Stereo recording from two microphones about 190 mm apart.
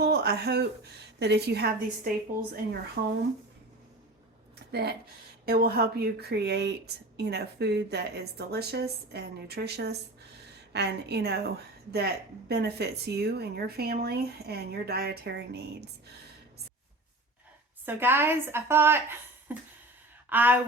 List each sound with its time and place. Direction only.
0.0 s a sound: 55° right (ahead or behind)
1.2 s a woman's voice: 60° right (ahead or behind)
3.0 s speech: 50° right (ahead or behind)
4.7 s a woman's voice: 60° right (ahead or behind)
17.8 s a woman's voice: 10° right (ahead or behind)